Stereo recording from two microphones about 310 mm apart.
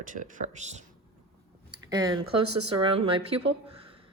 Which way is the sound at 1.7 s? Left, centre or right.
Centre.